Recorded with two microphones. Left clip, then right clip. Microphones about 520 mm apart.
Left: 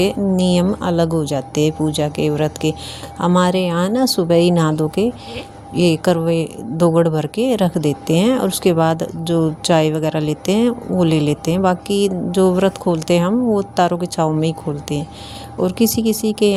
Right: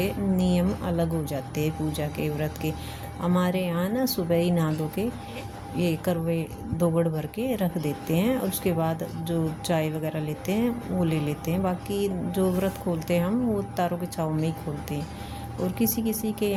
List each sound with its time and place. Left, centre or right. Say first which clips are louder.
0.0 s speech: left 10 dB; right